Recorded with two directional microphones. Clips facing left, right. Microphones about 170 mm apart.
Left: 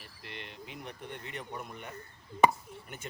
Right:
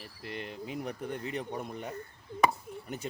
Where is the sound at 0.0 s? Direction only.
40° right (ahead or behind).